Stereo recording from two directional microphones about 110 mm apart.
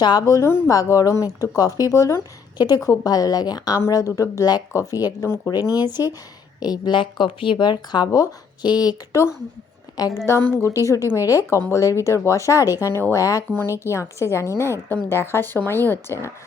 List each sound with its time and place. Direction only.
0.0 s a woman's voice: 35° left (ahead or behind)
10.6 s a woman's voice: 30° left (ahead or behind)